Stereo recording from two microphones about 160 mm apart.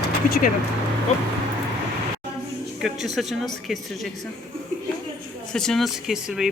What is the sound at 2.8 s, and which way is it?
Speech, centre (ahead or behind).